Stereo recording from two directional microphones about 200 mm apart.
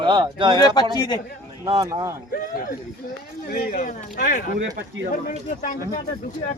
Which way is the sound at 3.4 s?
50° left (ahead or behind).